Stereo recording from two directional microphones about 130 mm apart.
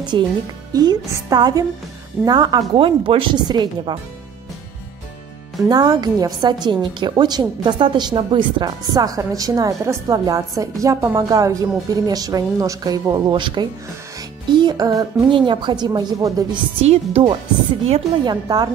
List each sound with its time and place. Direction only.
0.1 s speech: 35° right (ahead or behind)
2.7 s speech: 45° right (ahead or behind)
5.6 s a woman's voice: 30° right (ahead or behind)
16.8 s speech: 50° right (ahead or behind)
18.2 s speech: 35° right (ahead or behind)